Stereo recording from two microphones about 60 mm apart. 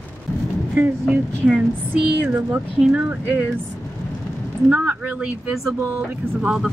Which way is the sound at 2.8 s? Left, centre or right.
Centre.